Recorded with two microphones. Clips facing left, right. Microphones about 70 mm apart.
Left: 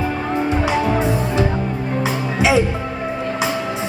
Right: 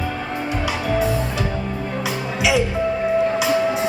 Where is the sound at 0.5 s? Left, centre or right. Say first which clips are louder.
Left 2 dB; left.